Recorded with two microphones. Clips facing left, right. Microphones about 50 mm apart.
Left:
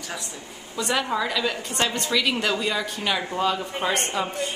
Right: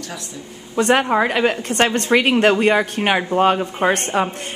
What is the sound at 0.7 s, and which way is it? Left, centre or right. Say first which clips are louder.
A woman's voice: right 9 dB; right.